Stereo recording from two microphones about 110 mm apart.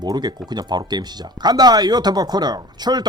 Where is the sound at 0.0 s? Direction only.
40° right (ahead or behind).